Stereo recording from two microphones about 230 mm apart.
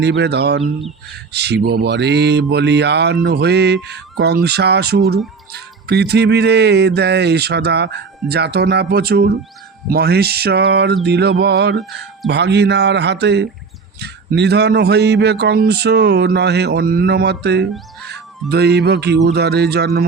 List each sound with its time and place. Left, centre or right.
0.0 s a man's voice: right
0.6 s speech: centre
1.3 s a man's voice: right